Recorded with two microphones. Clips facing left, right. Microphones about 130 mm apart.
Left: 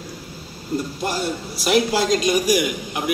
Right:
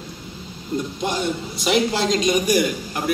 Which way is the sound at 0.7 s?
5° left (ahead or behind).